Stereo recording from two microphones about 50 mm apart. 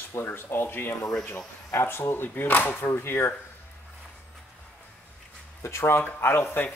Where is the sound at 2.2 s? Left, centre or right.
Left.